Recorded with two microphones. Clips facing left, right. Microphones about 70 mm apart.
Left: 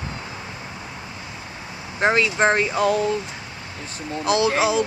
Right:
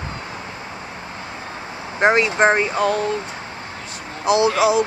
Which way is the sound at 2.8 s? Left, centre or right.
Centre.